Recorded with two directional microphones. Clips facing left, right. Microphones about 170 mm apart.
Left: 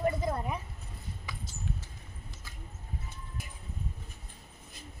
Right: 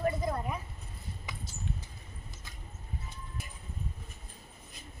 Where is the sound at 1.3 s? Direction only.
20° right (ahead or behind).